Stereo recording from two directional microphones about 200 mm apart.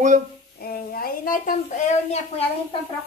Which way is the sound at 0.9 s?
45° left (ahead or behind).